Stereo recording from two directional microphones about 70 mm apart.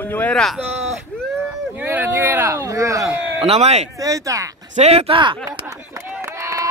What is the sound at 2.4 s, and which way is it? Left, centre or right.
Speech, right.